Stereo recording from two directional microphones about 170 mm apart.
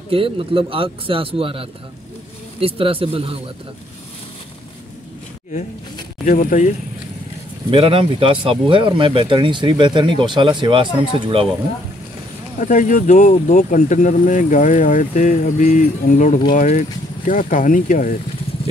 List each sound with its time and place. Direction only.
0.1 s speech: 30° right (ahead or behind)
6.2 s speech: 55° left (ahead or behind)
7.7 s speech: 30° right (ahead or behind)
12.5 s speech: 50° left (ahead or behind)